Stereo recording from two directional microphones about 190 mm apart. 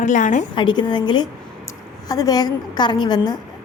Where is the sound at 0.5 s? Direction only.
25° left (ahead or behind).